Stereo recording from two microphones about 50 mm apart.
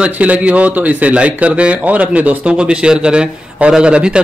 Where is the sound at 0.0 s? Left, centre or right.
Right.